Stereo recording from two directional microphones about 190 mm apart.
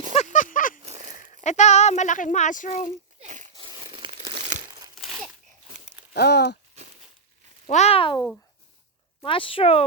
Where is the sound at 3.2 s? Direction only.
40° right (ahead or behind).